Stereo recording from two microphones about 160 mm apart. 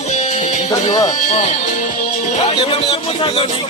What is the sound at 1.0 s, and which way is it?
Speech, 40° left (ahead or behind).